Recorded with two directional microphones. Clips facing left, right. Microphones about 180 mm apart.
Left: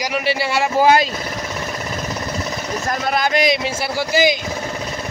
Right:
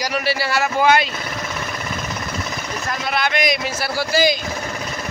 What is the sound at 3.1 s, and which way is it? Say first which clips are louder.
A man's voice: left 3 dB; 40° left (ahead or behind).